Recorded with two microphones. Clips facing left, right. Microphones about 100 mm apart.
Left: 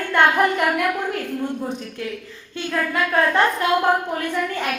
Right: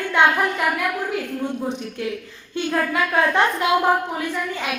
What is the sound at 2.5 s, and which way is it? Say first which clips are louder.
A woman's voice: right 2 dB; 25° right (ahead or behind).